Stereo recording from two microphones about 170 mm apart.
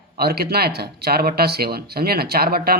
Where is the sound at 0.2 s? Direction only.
70° right (ahead or behind).